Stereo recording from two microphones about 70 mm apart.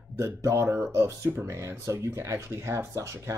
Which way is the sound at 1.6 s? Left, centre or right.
Right.